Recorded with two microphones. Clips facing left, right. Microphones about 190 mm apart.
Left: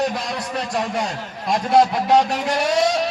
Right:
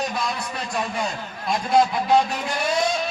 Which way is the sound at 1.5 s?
70° left (ahead or behind).